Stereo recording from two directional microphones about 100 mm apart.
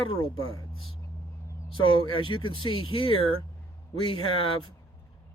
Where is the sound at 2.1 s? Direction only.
60° left (ahead or behind).